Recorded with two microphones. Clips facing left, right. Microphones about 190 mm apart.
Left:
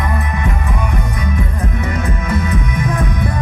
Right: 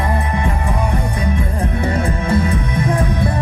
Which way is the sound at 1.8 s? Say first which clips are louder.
Right 2 dB; 30° right (ahead or behind).